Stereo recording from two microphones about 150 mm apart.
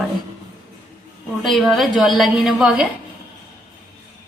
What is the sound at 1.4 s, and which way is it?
A woman's voice, centre (ahead or behind).